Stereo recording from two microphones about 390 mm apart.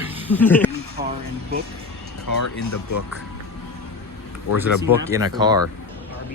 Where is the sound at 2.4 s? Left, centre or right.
Left.